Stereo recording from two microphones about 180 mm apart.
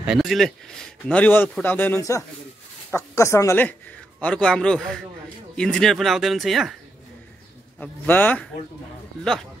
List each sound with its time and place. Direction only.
0.0 s a man's voice: centre (ahead or behind)
7.8 s a man's voice: 10° left (ahead or behind)